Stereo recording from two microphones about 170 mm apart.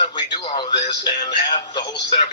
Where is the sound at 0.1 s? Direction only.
30° left (ahead or behind).